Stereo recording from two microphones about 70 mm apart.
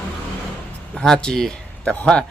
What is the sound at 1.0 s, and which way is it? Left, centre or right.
Speech, centre.